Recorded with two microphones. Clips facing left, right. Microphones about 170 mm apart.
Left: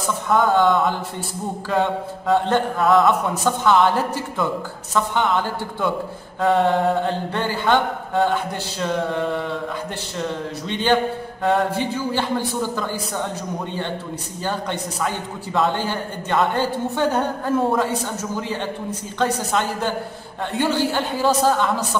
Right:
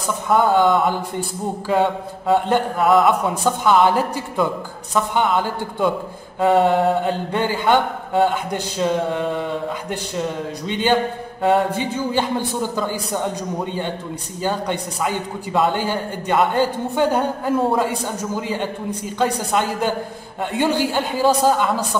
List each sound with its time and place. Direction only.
0.3 s mantra: 15° right (ahead or behind)
10.7 s mantra: 15° right (ahead or behind)
14.4 s mantra: 15° right (ahead or behind)